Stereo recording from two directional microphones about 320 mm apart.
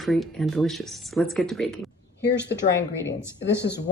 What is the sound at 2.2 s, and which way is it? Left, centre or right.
Speech, left.